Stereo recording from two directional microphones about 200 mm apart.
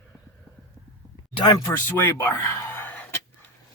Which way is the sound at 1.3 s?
20° left (ahead or behind).